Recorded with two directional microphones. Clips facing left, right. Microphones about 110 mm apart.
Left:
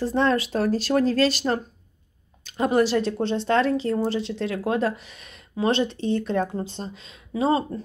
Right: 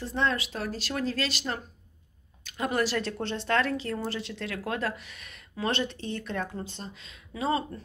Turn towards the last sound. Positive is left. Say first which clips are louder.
# left 7 dB
turn(degrees=30)  # may be behind; listen again after turning